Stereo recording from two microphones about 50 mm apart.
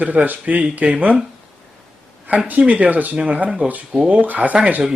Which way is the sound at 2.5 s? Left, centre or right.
Right.